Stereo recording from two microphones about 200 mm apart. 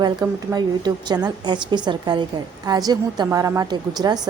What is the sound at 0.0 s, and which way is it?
A woman's voice, 20° right (ahead or behind).